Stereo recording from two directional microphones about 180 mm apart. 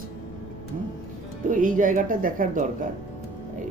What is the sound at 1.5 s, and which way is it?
A woman's voice, 50° right (ahead or behind).